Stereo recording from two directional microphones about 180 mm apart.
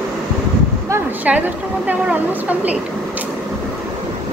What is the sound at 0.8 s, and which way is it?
A woman's voice, 10° right (ahead or behind).